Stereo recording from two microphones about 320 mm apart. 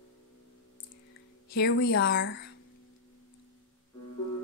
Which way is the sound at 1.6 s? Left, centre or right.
Left.